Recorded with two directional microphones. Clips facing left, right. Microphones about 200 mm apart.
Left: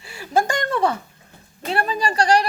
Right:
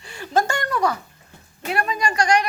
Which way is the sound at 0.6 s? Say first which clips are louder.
Left 1 dB; 30° left (ahead or behind).